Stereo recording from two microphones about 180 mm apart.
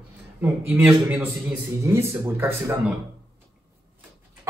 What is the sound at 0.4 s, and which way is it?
A man's voice, 10° right (ahead or behind).